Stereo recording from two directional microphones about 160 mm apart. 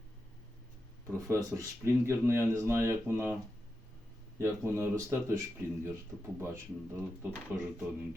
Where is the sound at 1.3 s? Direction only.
20° right (ahead or behind).